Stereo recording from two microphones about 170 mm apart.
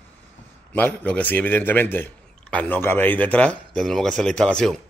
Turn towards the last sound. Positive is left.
turn(degrees=5)  # may be behind; listen again after turning